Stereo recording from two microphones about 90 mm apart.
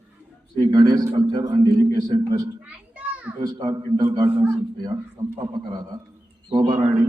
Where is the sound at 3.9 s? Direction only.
50° right (ahead or behind).